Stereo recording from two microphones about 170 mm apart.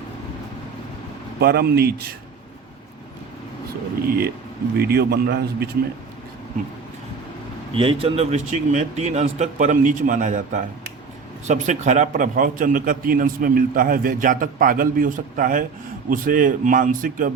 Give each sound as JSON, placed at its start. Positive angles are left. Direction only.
{"t": 1.4, "sound": "speech", "side_deg": -65}
{"t": 4.8, "sound": "a man's voice", "side_deg": -70}
{"t": 7.7, "sound": "a man's voice", "side_deg": -30}